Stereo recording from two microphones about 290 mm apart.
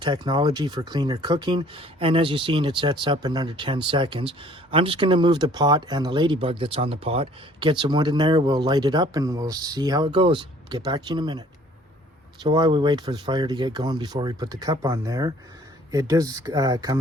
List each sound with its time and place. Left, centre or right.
0.0 s speech: centre